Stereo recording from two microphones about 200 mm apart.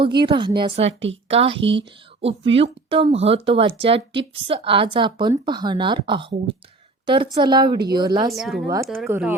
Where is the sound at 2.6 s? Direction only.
30° right (ahead or behind).